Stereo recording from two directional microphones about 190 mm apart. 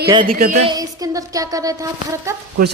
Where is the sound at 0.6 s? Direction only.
20° right (ahead or behind).